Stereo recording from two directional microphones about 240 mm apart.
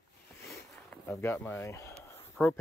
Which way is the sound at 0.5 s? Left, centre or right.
Centre.